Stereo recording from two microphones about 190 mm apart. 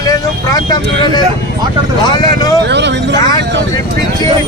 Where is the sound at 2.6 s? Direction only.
65° right (ahead or behind).